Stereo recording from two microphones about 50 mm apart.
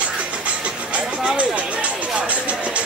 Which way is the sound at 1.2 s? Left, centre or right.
Right.